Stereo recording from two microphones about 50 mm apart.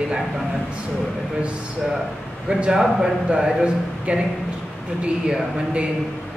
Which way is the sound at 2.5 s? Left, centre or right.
Centre.